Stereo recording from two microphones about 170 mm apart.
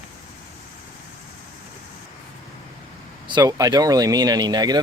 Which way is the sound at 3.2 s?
25° right (ahead or behind).